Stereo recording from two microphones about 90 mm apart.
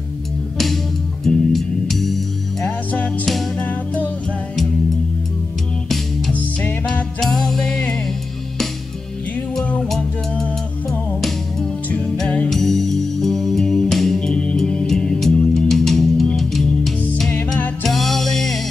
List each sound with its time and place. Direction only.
1.2 s music: 5° left (ahead or behind)
3.6 s music: 15° left (ahead or behind)
6.9 s music: 5° left (ahead or behind)
9.6 s music: 5° left (ahead or behind)